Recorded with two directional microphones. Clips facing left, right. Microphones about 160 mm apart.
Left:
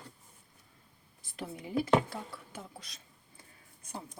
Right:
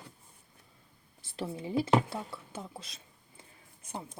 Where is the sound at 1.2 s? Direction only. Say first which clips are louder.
Right 4 dB; 25° right (ahead or behind).